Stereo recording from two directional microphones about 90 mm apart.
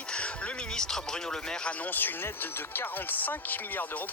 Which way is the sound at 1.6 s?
20° left (ahead or behind).